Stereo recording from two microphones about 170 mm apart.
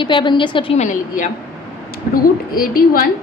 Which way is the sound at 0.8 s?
50° left (ahead or behind).